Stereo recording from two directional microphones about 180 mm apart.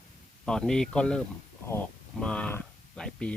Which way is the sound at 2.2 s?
5° left (ahead or behind).